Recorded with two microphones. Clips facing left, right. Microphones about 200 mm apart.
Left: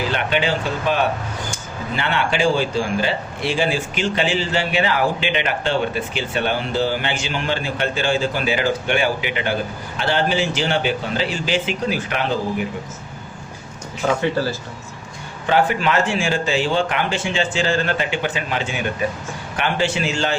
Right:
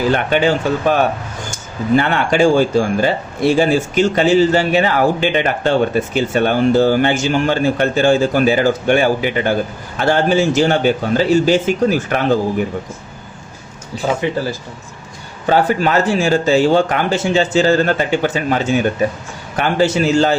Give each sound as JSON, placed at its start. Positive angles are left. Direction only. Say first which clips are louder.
{"t": 0.1, "sound": "a man's voice", "louder": "right 6 dB", "side_deg": -45}
{"t": 13.9, "sound": "speech", "louder": "right 2 dB", "side_deg": -35}
{"t": 14.2, "sound": "speech", "louder": "right 1 dB", "side_deg": -15}
{"t": 15.4, "sound": "speech", "louder": "right 4 dB", "side_deg": -40}